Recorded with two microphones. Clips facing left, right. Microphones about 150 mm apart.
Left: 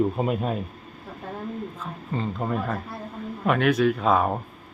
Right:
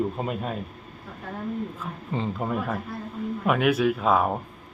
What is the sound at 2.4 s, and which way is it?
Speech, 5° right (ahead or behind).